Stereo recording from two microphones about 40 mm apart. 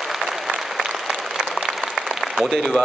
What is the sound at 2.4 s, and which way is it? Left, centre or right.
Speech, centre.